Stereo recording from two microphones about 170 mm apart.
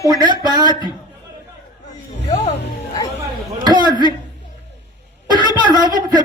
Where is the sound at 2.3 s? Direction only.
40° left (ahead or behind).